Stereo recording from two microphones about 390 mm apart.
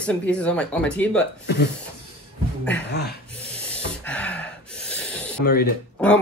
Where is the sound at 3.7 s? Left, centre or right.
Centre.